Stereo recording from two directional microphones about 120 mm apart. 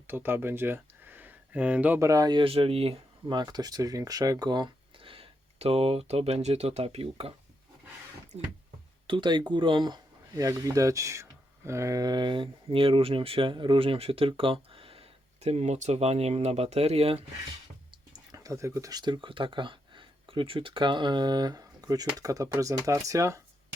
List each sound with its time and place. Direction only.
0.1 s speech: 20° right (ahead or behind)
2.0 s speech: 30° right (ahead or behind)
2.4 s speech: 50° right (ahead or behind)
9.0 s speech: 40° right (ahead or behind); by 17.2 s 55° right (ahead or behind)
18.1 s speech: 30° right (ahead or behind)